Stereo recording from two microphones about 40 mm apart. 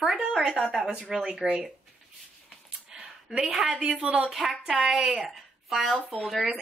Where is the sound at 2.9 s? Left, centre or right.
Right.